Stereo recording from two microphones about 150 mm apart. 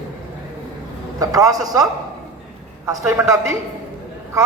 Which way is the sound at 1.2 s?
25° right (ahead or behind).